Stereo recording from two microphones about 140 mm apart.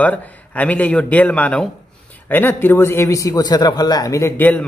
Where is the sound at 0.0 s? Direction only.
10° left (ahead or behind).